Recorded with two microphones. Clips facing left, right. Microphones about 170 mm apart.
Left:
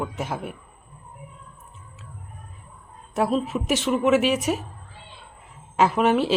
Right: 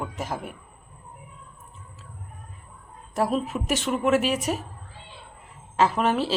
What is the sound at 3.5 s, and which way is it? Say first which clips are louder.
A woman's voice: left 3 dB; 5° left (ahead or behind).